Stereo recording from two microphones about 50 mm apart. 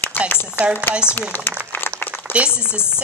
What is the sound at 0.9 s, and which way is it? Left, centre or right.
Speech, right.